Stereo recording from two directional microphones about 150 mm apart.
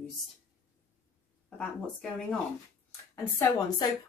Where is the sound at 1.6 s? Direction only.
5° left (ahead or behind).